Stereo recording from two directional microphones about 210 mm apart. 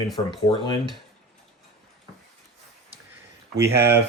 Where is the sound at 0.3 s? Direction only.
20° left (ahead or behind).